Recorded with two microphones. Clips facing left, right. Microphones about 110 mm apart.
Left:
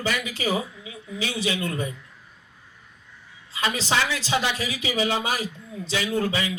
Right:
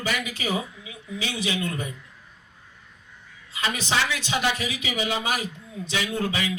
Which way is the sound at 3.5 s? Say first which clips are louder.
Left 2 dB; 30° left (ahead or behind).